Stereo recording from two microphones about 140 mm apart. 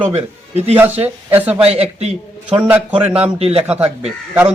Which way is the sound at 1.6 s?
50° right (ahead or behind).